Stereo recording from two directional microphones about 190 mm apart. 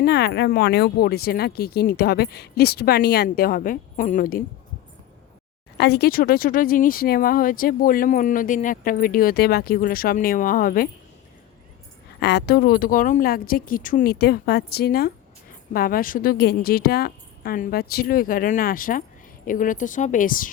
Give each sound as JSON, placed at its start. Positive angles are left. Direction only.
{"t": 0.0, "sound": "speech", "side_deg": 60}
{"t": 5.7, "sound": "speech", "side_deg": 60}
{"t": 12.2, "sound": "speech", "side_deg": 60}